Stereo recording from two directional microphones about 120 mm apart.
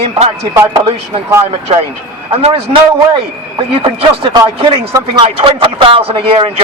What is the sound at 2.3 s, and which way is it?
Speech, 55° right (ahead or behind).